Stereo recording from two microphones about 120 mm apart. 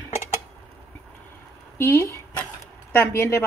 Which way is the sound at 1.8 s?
25° left (ahead or behind).